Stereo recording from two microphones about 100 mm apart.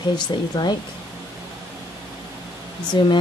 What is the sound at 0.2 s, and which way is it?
Speech, 45° left (ahead or behind).